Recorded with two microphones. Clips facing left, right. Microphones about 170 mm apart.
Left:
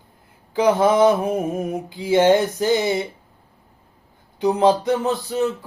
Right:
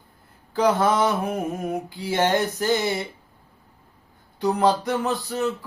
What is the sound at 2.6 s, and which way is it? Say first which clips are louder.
Mantra: left 4 dB; 20° left (ahead or behind).